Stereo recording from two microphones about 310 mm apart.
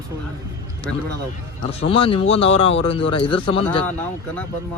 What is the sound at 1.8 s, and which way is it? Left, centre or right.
A man's voice, centre.